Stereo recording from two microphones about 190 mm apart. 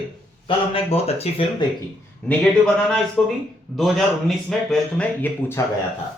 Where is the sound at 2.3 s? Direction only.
5° left (ahead or behind).